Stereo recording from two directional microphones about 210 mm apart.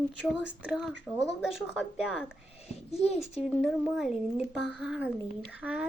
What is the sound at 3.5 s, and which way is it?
Speech, centre (ahead or behind).